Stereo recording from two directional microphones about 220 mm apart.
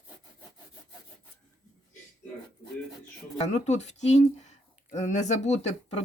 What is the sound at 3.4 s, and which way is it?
Speech, 30° left (ahead or behind).